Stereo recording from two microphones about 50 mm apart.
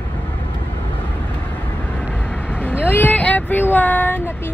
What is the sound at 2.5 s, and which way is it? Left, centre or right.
Vehicle, left.